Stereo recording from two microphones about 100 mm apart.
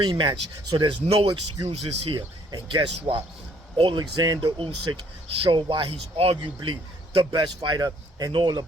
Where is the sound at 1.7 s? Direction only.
80° right.